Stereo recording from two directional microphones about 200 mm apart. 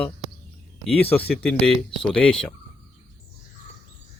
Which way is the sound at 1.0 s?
10° left (ahead or behind).